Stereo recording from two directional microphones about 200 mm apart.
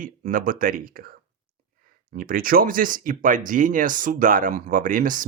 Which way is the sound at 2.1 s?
45° right (ahead or behind).